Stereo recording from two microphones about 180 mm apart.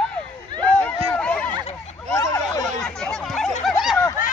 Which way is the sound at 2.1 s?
20° left (ahead or behind).